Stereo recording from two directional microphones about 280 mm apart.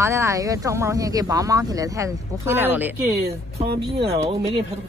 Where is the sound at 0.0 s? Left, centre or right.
Centre.